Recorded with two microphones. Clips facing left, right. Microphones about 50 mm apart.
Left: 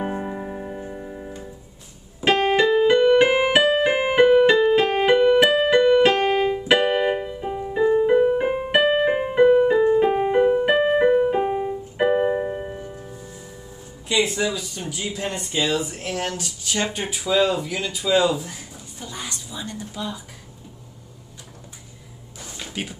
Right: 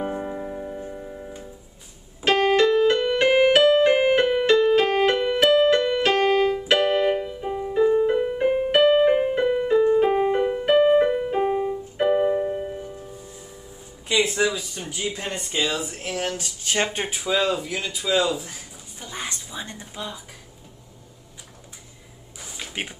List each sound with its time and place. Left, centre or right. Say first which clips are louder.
0.0 s music: left 1 dB; centre
2.2 s keyboard: even; centre
14.2 s speech: right 3 dB; centre
15.0 s speech: even; centre
15.6 s speech: left 3 dB; centre
16.6 s speech: right 1 dB; right
17.4 s speech: left 4 dB; centre
19.1 s a sound: right 2 dB; right
22.4 s a sound: even; centre
22.7 s speech: left 1 dB; right